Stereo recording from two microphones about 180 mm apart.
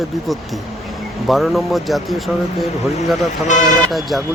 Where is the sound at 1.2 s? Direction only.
Centre (ahead or behind).